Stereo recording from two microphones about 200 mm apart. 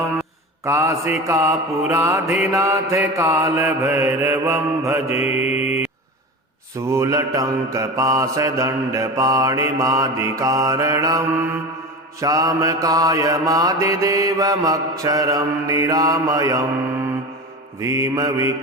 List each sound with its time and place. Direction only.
0.6 s mantra: 15° right (ahead or behind)
5.0 s mantra: 30° left (ahead or behind)
6.7 s mantra: 15° right (ahead or behind)
12.2 s mantra: 15° right (ahead or behind)
17.7 s mantra: 15° right (ahead or behind)